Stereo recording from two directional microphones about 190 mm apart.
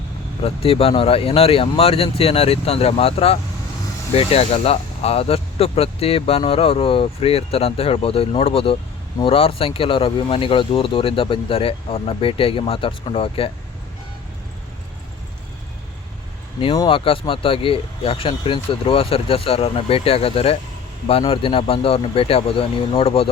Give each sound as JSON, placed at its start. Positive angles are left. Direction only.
{"t": 0.4, "sound": "speech", "side_deg": 30}
{"t": 16.7, "sound": "speech", "side_deg": 25}